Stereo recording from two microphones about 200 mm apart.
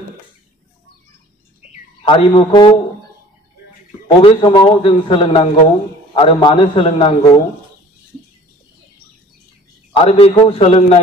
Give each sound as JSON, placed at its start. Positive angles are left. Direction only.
{"t": 2.0, "sound": "a man's voice", "side_deg": 25}
{"t": 4.2, "sound": "a man's voice", "side_deg": 25}
{"t": 10.0, "sound": "a man's voice", "side_deg": 30}